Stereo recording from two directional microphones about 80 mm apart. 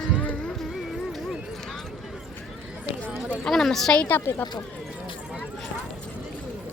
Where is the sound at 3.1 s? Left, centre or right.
Right.